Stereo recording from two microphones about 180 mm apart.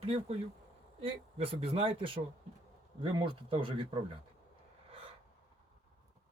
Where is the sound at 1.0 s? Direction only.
30° right (ahead or behind).